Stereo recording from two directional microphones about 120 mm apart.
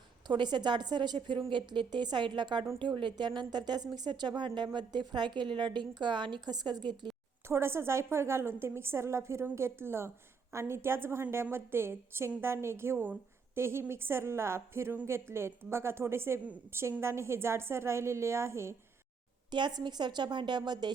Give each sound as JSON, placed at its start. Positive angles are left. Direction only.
{"t": 0.3, "sound": "a woman's voice", "side_deg": -40}
{"t": 7.4, "sound": "a woman's voice", "side_deg": -20}
{"t": 19.5, "sound": "a woman's voice", "side_deg": -40}